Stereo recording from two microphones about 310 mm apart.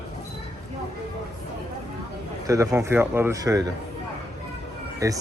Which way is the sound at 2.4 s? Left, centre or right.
Centre.